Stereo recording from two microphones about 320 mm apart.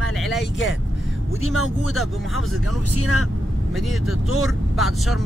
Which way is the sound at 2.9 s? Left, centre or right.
Left.